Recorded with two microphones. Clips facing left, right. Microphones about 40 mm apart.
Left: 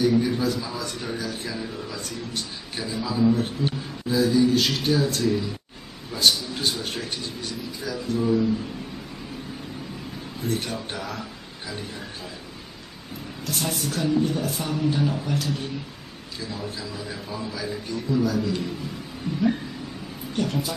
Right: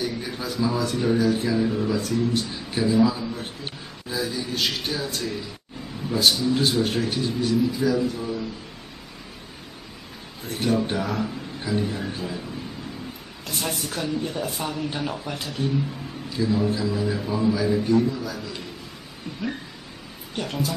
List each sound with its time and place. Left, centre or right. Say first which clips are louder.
0.0 s speech: left 8 dB; centre
10.5 s a man's voice: right 7 dB; centre
13.8 s a man's voice: left 4 dB; centre
16.3 s a man's voice: right 10 dB; centre
20.3 s a man's voice: left 2 dB; centre